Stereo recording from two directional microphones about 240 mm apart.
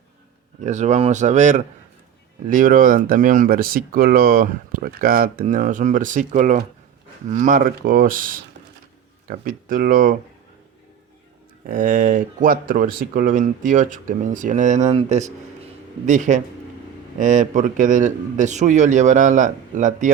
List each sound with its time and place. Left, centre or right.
0.6 s speech: right
11.6 s speech: right